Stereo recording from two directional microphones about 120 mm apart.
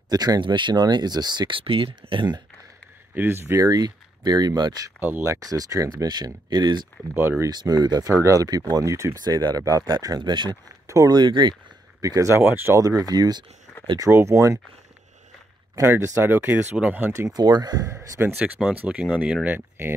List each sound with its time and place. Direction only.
0.1 s speech: 30° right (ahead or behind)
3.2 s speech: 20° right (ahead or behind)
5.0 s speech: 20° right (ahead or behind); by 6.9 s 35° right (ahead or behind)
7.2 s speech: 15° right (ahead or behind)
7.4 s speech: 35° right (ahead or behind)
12.0 s speech: 30° right (ahead or behind)
15.7 s speech: 20° right (ahead or behind)
17.3 s speech: 35° right (ahead or behind); by 19.9 s 15° right (ahead or behind)